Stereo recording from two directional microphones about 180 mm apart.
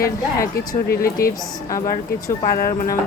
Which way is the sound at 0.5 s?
55° left (ahead or behind).